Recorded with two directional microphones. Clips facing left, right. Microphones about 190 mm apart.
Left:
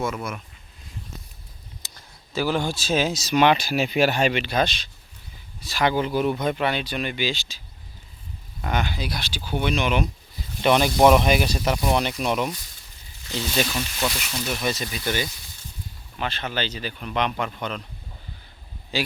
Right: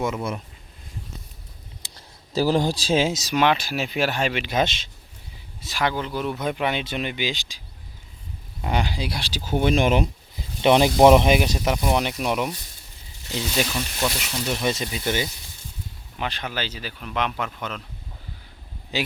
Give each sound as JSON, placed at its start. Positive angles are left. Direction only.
{"t": 0.0, "sound": "speech", "side_deg": -20}
{"t": 2.0, "sound": "speech", "side_deg": -35}
{"t": 3.3, "sound": "speech", "side_deg": 0}
{"t": 4.4, "sound": "speech", "side_deg": -20}
{"t": 5.8, "sound": "speech", "side_deg": 10}
{"t": 6.3, "sound": "speech", "side_deg": -5}
{"t": 8.7, "sound": "speech", "side_deg": -30}
{"t": 10.6, "sound": "speech", "side_deg": -20}
{"t": 14.5, "sound": "speech", "side_deg": -25}
{"t": 18.9, "sound": "speech", "side_deg": -20}